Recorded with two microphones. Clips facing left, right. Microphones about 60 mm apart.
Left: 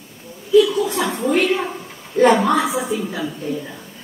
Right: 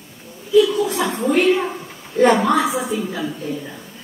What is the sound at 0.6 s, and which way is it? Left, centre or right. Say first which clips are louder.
A woman's voice: even; centre.